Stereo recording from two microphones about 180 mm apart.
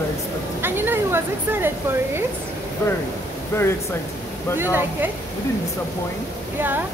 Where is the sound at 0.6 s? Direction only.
10° right (ahead or behind).